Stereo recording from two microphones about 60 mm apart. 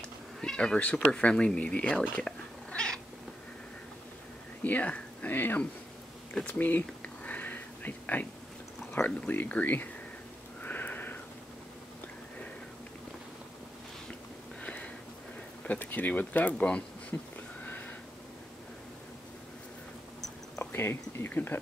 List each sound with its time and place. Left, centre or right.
0.4 s speech: centre
2.1 s cat: centre
4.6 s speech: left
6.4 s a sound: left
8.9 s speech: left
10.6 s sniff: left
14.6 s a sound: left
15.8 s speech: left
20.7 s speech: left